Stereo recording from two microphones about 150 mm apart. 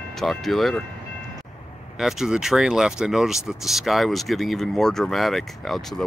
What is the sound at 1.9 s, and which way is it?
Speech, 5° right (ahead or behind).